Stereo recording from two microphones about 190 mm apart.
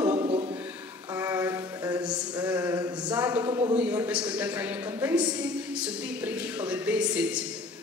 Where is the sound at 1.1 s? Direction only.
15° right (ahead or behind).